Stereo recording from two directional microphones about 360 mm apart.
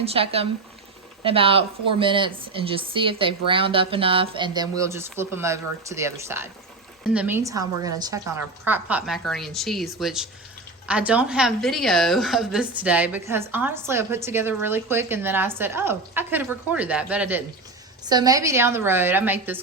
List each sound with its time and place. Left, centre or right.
0.0 s a woman's voice: centre